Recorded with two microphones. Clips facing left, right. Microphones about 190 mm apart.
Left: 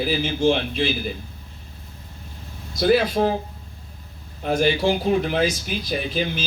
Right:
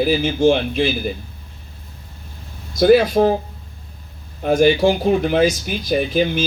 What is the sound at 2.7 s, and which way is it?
Speech, 45° right (ahead or behind).